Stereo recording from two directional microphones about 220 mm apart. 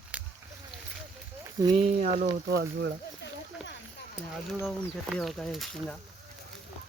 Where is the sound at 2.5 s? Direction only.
50° right (ahead or behind).